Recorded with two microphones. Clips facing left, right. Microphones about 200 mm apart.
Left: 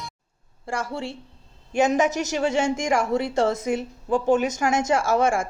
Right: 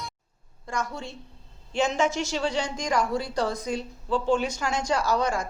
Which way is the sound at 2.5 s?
25° left (ahead or behind).